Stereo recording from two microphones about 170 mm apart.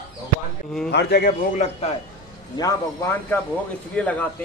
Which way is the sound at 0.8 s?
70° left (ahead or behind).